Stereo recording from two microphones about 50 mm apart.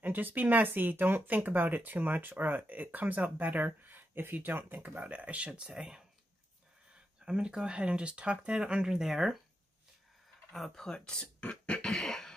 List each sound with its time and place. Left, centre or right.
0.0 s speech: right
5.0 s speech: right; by 6.0 s centre
7.2 s speech: centre
10.5 s speech: centre
11.4 s beatboxing: left